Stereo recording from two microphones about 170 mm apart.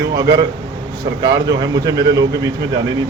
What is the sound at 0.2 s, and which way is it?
Speech, 25° right (ahead or behind).